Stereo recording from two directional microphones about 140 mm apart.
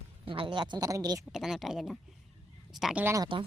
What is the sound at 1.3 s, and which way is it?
Speech, centre (ahead or behind).